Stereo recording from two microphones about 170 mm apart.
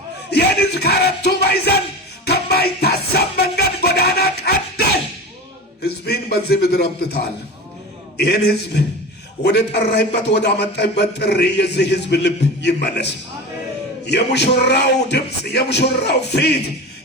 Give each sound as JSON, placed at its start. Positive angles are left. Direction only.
{"t": 0.3, "sound": "music", "side_deg": 70}
{"t": 5.8, "sound": "a man's voice", "side_deg": 70}
{"t": 8.2, "sound": "a man's voice", "side_deg": 70}
{"t": 14.1, "sound": "a man's voice", "side_deg": 75}